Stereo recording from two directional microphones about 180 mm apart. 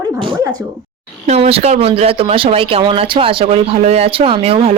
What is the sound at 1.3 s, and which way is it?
Speech, 35° right (ahead or behind).